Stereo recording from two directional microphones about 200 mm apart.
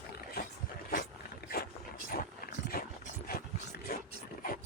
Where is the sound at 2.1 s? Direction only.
50° left (ahead or behind).